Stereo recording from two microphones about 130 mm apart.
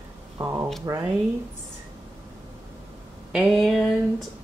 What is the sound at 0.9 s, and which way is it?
Speech, 25° right (ahead or behind).